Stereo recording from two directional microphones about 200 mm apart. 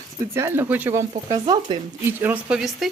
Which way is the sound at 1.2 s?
20° right (ahead or behind).